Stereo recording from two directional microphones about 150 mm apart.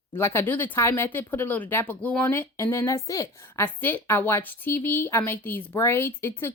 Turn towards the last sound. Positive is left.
turn(degrees=15)  # may be behind; listen again after turning